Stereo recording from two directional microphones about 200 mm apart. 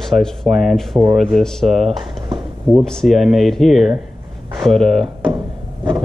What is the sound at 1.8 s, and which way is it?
Speech, 25° right (ahead or behind).